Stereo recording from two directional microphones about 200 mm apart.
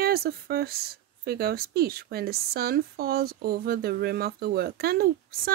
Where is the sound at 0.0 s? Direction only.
50° right (ahead or behind).